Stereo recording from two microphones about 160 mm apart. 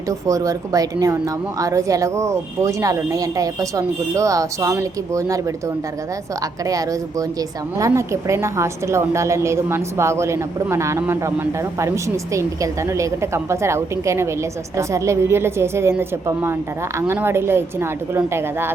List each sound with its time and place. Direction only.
0.1 s speech: 20° right (ahead or behind)